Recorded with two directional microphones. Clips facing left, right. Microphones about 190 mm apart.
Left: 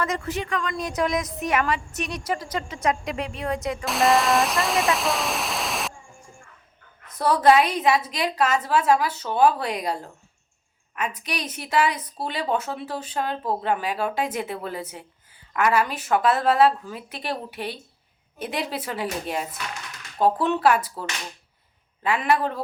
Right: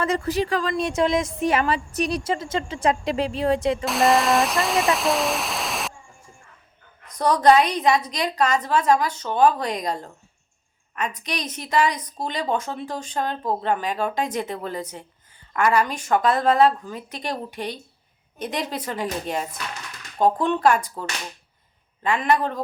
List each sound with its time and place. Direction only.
0.0 s a woman's voice: 35° right (ahead or behind)
3.8 s speech: centre (ahead or behind)
7.1 s speech: 5° left (ahead or behind)